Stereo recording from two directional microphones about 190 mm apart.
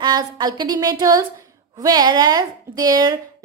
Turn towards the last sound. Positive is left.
turn(degrees=-20)  # may be behind; listen again after turning